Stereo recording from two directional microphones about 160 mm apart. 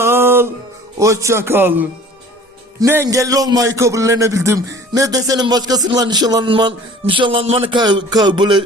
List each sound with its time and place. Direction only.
0.0 s music: 15° right (ahead or behind)
0.9 s a man's voice: 20° right (ahead or behind)